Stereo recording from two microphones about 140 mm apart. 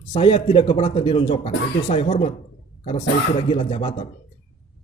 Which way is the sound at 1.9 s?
50° left (ahead or behind).